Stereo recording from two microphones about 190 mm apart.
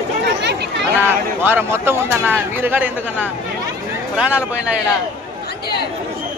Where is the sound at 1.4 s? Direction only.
10° right (ahead or behind).